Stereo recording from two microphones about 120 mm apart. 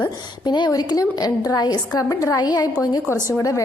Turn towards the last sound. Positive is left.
turn(degrees=25)  # may be behind; listen again after turning